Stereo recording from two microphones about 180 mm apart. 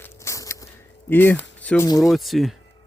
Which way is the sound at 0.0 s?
15° left (ahead or behind).